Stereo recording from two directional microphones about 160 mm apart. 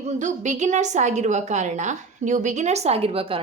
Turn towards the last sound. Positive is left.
turn(degrees=-35)  # may be behind; listen again after turning